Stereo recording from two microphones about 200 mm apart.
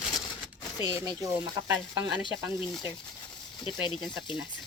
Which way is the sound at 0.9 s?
20° right (ahead or behind).